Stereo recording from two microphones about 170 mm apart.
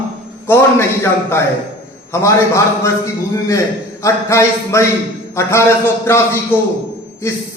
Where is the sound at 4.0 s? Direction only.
15° left (ahead or behind).